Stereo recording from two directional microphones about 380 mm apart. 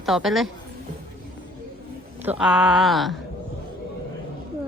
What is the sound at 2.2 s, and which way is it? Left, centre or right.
Speech, centre.